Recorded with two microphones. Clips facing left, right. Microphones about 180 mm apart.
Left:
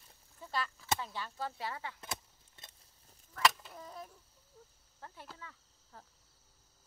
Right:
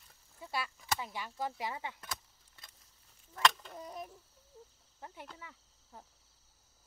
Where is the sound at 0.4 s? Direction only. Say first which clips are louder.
Left 1 dB; 10° right (ahead or behind).